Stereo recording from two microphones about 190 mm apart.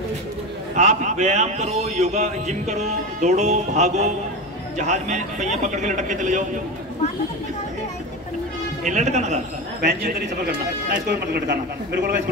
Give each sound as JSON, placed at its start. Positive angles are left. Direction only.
{"t": 0.7, "sound": "speech", "side_deg": -40}
{"t": 8.8, "sound": "speech", "side_deg": -40}
{"t": 9.8, "sound": "speech", "side_deg": -55}